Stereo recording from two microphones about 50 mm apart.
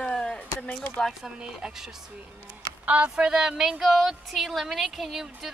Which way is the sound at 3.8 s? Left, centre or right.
Centre.